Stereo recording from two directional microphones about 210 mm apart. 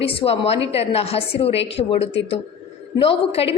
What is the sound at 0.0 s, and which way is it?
A woman's voice, 25° left (ahead or behind).